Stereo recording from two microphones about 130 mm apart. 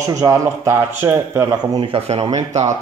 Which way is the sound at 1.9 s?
50° right (ahead or behind).